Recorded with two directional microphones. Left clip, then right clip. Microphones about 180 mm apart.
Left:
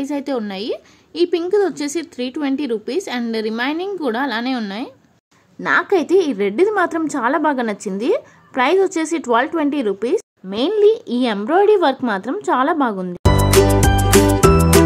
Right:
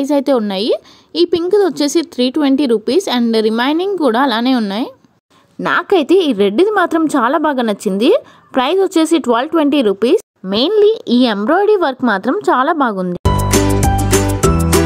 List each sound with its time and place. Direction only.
0.0 s a woman's voice: 30° right (ahead or behind)
13.2 s music: centre (ahead or behind)